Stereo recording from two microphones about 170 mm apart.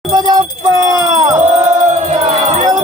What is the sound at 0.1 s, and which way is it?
Music, 25° right (ahead or behind).